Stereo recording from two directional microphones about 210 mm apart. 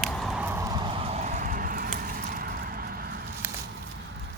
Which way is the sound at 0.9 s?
30° right (ahead or behind).